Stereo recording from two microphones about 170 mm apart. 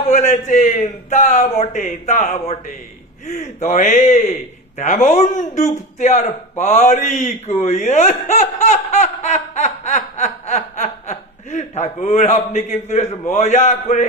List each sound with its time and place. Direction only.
0.0 s a man's voice: 40° left (ahead or behind)